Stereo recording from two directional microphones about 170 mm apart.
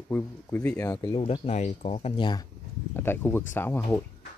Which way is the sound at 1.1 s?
35° left (ahead or behind).